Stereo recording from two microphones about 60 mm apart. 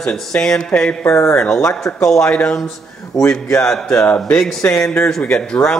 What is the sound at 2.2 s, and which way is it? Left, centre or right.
Speech, centre.